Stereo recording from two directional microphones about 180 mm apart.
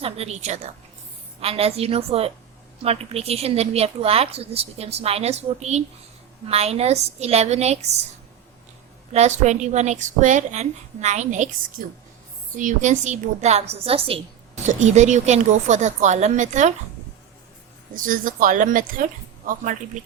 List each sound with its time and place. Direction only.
0.0 s a woman's voice: 35° right (ahead or behind)
9.1 s a woman's voice: 40° right (ahead or behind)
17.9 s speech: 50° right (ahead or behind)